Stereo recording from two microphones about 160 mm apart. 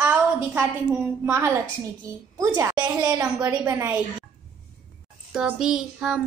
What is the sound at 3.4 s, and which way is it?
Speech, 15° right (ahead or behind).